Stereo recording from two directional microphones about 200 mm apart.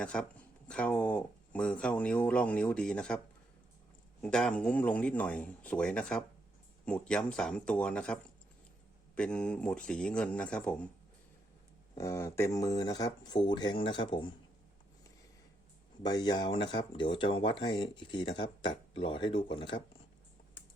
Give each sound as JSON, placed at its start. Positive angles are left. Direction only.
{"t": 0.0, "sound": "speech", "side_deg": 5}
{"t": 4.2, "sound": "speech", "side_deg": 5}
{"t": 11.9, "sound": "speech", "side_deg": 15}
{"t": 16.0, "sound": "speech", "side_deg": 20}